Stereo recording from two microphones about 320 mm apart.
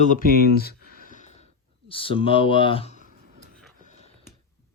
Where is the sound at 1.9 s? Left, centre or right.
Centre.